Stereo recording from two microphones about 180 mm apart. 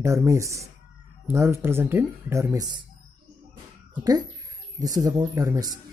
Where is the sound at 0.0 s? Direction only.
15° right (ahead or behind).